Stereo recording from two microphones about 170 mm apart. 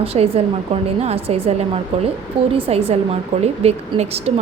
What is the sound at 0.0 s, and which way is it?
A woman's voice, 35° right (ahead or behind).